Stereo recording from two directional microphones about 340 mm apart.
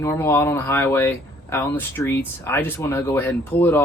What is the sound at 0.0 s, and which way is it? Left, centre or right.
Speech, centre.